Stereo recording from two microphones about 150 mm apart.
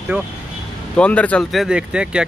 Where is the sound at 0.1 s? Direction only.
10° right (ahead or behind).